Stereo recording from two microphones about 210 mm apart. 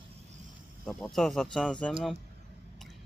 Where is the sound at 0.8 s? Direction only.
Centre (ahead or behind).